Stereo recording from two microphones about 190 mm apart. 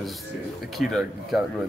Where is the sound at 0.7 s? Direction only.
Centre (ahead or behind).